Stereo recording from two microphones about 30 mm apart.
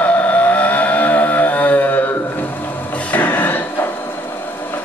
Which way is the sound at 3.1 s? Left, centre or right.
Left.